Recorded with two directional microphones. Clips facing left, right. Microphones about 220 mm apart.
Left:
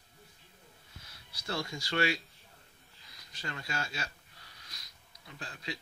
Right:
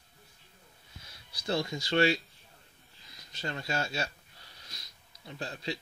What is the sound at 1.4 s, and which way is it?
Speech, 20° right (ahead or behind).